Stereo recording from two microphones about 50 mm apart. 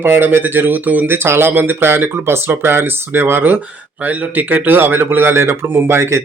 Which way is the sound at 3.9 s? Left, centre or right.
Right.